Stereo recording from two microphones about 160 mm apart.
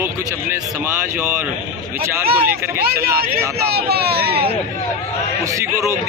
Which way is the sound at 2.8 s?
75° right (ahead or behind).